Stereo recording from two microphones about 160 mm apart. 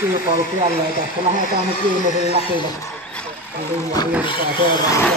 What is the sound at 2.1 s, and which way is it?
Speech, 45° left (ahead or behind).